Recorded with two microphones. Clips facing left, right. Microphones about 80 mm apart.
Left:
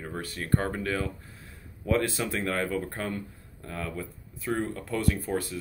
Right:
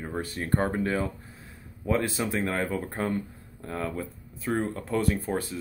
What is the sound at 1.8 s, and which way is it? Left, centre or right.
Speech, centre.